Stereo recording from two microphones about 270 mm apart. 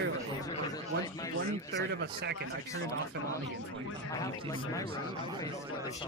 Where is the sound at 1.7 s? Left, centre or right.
Right.